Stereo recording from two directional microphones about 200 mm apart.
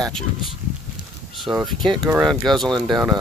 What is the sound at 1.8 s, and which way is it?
Speech, 25° right (ahead or behind).